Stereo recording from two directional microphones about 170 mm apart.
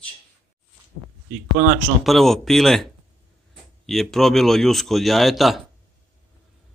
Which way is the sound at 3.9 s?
Centre (ahead or behind).